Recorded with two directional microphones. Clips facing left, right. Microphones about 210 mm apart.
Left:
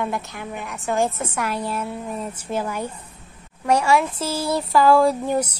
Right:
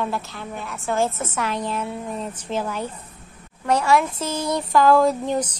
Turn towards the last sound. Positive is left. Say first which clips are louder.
# left 1 dB
turn(degrees=10)  # may be behind; listen again after turning